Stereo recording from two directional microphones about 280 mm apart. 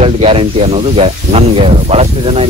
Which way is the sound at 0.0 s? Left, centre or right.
Right.